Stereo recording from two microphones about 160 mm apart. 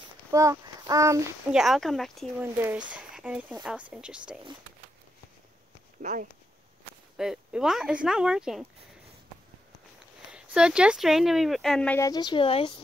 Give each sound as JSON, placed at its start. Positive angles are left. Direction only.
{"t": 0.3, "sound": "a child's voice", "side_deg": -20}
{"t": 1.5, "sound": "speech", "side_deg": 0}
{"t": 2.4, "sound": "speech", "side_deg": -15}
{"t": 6.0, "sound": "speech", "side_deg": -55}
{"t": 7.2, "sound": "speech", "side_deg": -5}
{"t": 10.3, "sound": "speech", "side_deg": -5}
{"t": 12.0, "sound": "speech", "side_deg": 25}